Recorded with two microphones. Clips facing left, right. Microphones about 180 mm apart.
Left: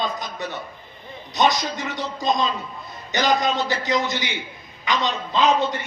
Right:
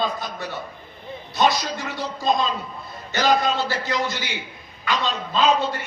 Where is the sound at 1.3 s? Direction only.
20° left (ahead or behind).